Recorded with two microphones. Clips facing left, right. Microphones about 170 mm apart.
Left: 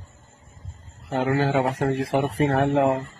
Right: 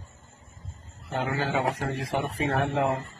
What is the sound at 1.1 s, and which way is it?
Speech, 65° left (ahead or behind).